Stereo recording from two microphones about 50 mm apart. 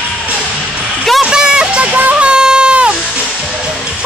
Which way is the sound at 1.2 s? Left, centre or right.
Centre.